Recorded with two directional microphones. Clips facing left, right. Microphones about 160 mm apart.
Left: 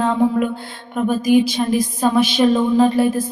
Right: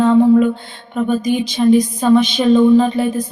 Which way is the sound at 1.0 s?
5° left (ahead or behind).